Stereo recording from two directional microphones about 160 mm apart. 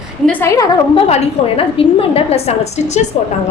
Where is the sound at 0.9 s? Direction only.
35° left (ahead or behind).